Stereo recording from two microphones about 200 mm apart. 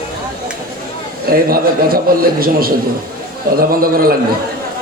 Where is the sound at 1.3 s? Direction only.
45° right (ahead or behind).